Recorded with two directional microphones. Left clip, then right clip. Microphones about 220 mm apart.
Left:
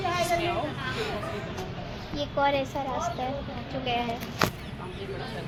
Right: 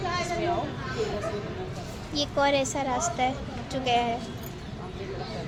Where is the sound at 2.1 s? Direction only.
35° right (ahead or behind).